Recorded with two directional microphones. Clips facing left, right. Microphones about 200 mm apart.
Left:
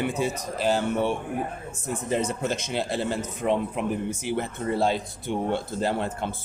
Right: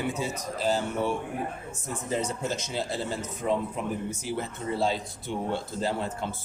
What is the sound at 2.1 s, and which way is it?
A man's voice, 65° left (ahead or behind).